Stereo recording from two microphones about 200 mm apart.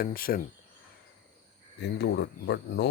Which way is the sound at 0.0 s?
45° left (ahead or behind).